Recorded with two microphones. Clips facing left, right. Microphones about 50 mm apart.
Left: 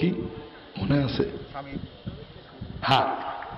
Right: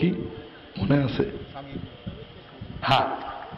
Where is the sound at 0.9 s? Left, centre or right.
Right.